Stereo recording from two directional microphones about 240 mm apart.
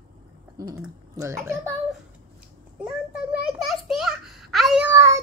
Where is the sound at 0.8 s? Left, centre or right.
Centre.